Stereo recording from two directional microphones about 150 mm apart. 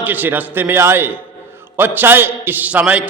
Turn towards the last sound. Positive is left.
turn(degrees=-10)  # may be behind; listen again after turning